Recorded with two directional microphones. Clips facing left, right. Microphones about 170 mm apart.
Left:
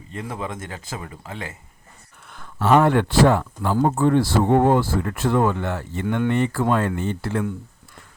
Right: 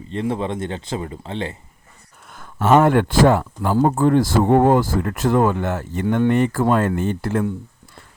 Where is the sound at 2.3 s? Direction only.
45° right (ahead or behind).